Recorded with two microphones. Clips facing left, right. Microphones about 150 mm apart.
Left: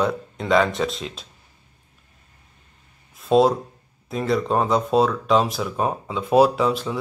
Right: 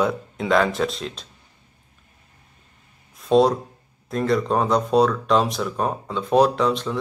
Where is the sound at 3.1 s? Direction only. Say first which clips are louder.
Even; centre (ahead or behind).